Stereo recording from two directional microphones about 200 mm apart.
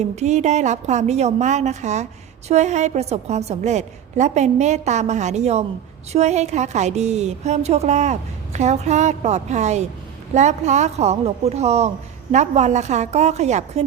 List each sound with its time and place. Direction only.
0.0 s a woman's voice: 35° right (ahead or behind)